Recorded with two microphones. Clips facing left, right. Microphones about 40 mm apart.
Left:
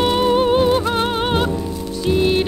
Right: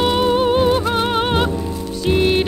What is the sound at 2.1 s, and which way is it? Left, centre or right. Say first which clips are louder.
Music: right 1 dB; right.